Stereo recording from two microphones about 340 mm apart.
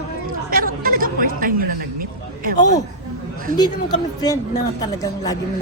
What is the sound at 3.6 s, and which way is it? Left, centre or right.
A woman's voice, centre.